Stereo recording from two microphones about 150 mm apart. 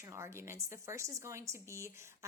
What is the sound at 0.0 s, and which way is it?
A woman's voice, 20° right (ahead or behind).